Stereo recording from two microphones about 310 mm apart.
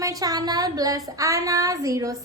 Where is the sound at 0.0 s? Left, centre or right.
Centre.